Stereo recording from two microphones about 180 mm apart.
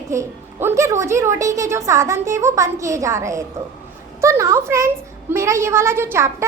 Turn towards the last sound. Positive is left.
turn(degrees=-15)  # may be behind; listen again after turning